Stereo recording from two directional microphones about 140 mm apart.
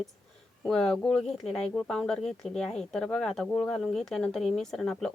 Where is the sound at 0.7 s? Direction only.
5° left (ahead or behind).